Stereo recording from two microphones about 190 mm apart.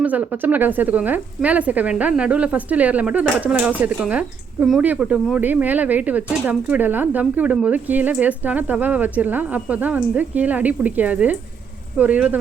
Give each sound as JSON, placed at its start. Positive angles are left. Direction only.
{"t": 0.0, "sound": "speech", "side_deg": -10}